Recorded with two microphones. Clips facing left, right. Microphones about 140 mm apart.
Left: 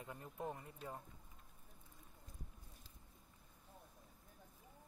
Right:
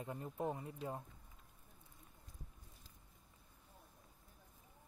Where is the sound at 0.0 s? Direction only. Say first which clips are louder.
Right 5 dB; 25° right (ahead or behind).